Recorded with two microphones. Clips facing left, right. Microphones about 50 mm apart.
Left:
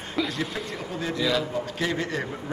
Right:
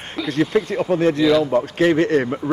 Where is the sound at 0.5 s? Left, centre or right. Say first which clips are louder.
Right 14 dB; right.